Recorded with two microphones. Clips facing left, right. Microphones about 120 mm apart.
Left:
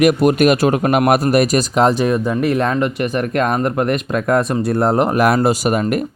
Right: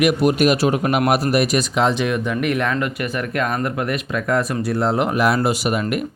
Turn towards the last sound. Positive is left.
turn(degrees=40)  # may be behind; listen again after turning